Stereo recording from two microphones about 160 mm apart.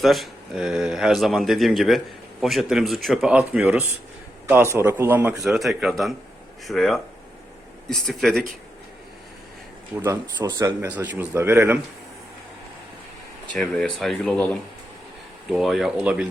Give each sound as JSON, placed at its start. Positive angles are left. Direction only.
{"t": 0.0, "sound": "a man's voice", "side_deg": 0}
{"t": 10.0, "sound": "speech", "side_deg": -25}
{"t": 10.8, "sound": "a man's voice", "side_deg": -10}
{"t": 13.5, "sound": "speech", "side_deg": 5}